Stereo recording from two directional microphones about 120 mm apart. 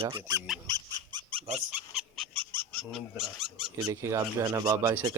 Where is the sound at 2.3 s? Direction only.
45° right (ahead or behind).